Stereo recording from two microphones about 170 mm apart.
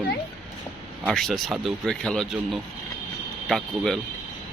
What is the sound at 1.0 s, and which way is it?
Speech, centre (ahead or behind).